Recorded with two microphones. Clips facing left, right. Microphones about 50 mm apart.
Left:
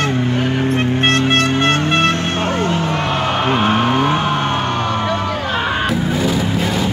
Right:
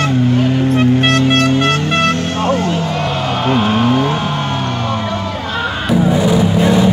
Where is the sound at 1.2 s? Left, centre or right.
Left.